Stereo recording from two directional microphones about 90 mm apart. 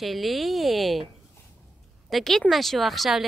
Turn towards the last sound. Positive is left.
turn(degrees=0)  # may be behind; listen again after turning